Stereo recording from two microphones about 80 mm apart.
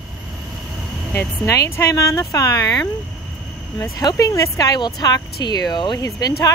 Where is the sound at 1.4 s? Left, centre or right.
Left.